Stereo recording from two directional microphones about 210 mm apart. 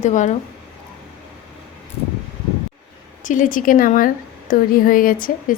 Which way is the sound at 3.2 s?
40° left (ahead or behind).